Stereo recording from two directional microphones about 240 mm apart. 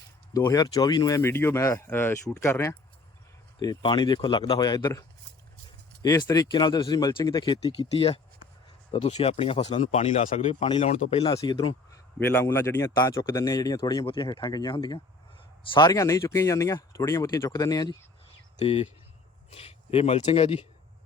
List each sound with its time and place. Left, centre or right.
0.3 s speech: centre